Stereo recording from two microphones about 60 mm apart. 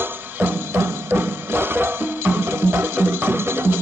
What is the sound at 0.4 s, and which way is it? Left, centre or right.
Music, right.